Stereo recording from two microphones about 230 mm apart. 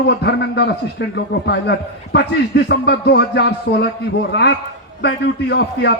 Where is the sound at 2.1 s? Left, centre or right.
Left.